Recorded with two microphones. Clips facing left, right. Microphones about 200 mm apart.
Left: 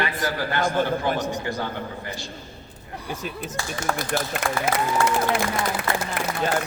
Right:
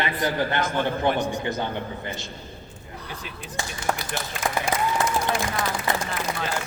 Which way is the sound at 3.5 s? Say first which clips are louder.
Right 1 dB; 45° left (ahead or behind).